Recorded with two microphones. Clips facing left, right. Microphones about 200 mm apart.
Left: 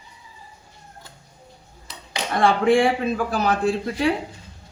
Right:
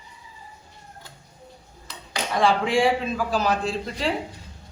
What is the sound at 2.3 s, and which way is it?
A man's voice, 55° left (ahead or behind).